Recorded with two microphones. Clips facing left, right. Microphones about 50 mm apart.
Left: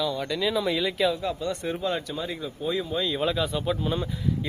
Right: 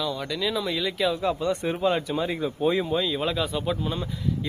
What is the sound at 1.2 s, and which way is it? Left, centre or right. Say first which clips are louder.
Speech: right 4 dB; right.